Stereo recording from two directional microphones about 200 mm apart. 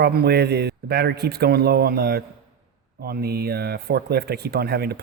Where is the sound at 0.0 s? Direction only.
55° right (ahead or behind).